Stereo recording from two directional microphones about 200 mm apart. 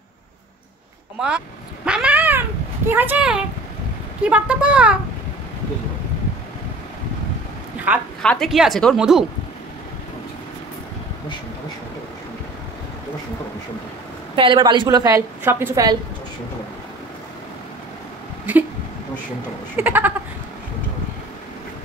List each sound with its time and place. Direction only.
1.9 s cat: 5° right (ahead or behind)
2.9 s a woman's voice: 10° right (ahead or behind)
7.9 s speech: 10° right (ahead or behind)
8.2 s a woman's voice: 5° left (ahead or behind)
14.3 s a woman's voice: 25° right (ahead or behind)
19.8 s a sound: 10° right (ahead or behind)